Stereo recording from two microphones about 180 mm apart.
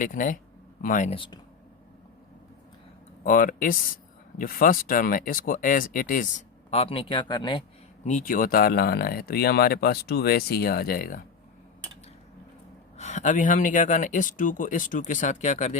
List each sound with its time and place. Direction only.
0.0 s speech: 45° left (ahead or behind)
1.1 s speech: 30° left (ahead or behind)
3.2 s speech: 50° left (ahead or behind); by 7.6 s 25° left (ahead or behind)
8.0 s speech: 45° left (ahead or behind)
13.0 s speech: 40° left (ahead or behind)